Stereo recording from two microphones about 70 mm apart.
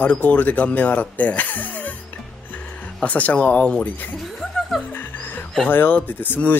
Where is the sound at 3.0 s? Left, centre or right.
Left.